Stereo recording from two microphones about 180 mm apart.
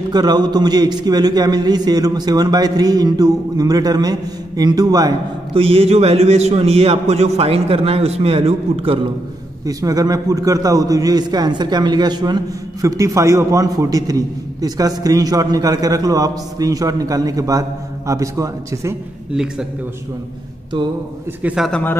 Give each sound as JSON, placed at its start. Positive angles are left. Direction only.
{"t": 0.1, "sound": "a man's voice", "side_deg": -20}
{"t": 9.7, "sound": "a man's voice", "side_deg": -20}
{"t": 21.4, "sound": "a man's voice", "side_deg": -10}
{"t": 21.6, "sound": "speech", "side_deg": 5}